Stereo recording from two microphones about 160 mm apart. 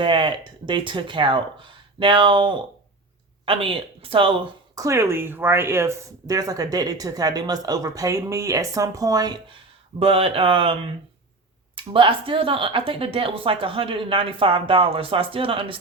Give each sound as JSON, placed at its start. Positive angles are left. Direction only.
{"t": 0.0, "sound": "a woman's voice", "side_deg": -30}
{"t": 4.8, "sound": "speech", "side_deg": -20}
{"t": 10.0, "sound": "speech", "side_deg": -40}